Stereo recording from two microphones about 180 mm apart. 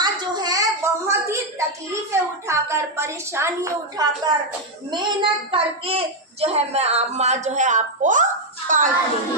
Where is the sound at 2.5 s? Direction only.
15° right (ahead or behind); by 8.8 s 45° right (ahead or behind).